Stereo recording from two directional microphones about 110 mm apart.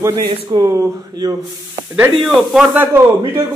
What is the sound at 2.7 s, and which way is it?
Speech, 20° right (ahead or behind).